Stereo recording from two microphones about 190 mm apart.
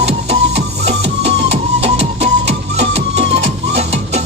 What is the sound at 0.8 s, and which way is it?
Music, 60° right (ahead or behind).